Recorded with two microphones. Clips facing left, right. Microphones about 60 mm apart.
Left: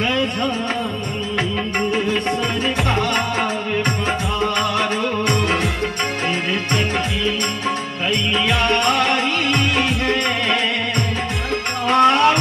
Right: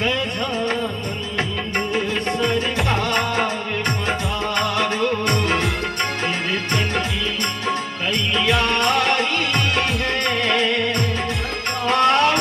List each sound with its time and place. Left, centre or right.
2.9 s music: centre
4.6 s music: centre
8.5 s music: centre
11.9 s music: centre